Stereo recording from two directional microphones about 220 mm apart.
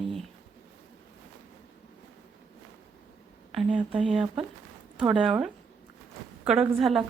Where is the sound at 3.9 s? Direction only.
25° right (ahead or behind).